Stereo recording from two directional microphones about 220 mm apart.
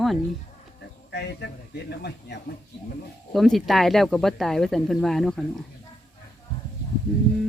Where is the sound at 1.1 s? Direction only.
50° left (ahead or behind).